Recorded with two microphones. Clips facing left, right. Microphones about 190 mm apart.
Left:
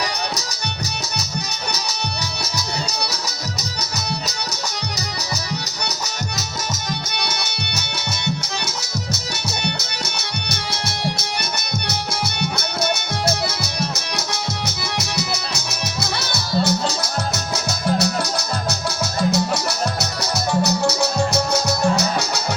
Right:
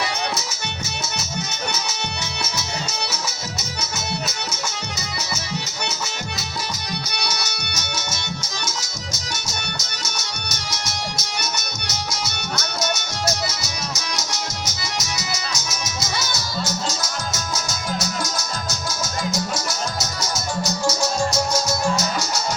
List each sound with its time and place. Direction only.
3.1 s music: 35° left (ahead or behind)
7.3 s music: 55° left (ahead or behind)
14.7 s music: 60° left (ahead or behind)
20.0 s music: 65° left (ahead or behind)